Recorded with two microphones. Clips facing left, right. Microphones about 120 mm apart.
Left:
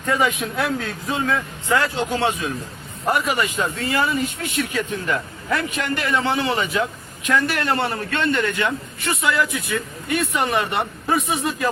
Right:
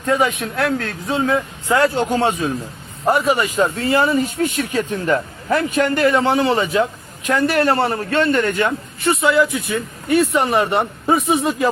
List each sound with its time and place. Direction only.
0.0 s a man's voice: 5° right (ahead or behind)
1.0 s speech: 25° right (ahead or behind)
2.0 s speech: 40° right (ahead or behind)
9.0 s speech: 25° right (ahead or behind)
11.0 s speech: 25° right (ahead or behind)